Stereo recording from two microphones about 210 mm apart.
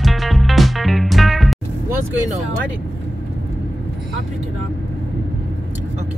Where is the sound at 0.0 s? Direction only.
Centre (ahead or behind).